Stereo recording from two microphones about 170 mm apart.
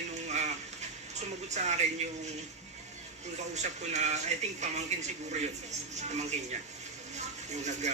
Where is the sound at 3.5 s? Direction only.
40° right (ahead or behind).